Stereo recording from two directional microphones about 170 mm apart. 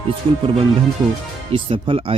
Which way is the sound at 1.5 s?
30° right (ahead or behind).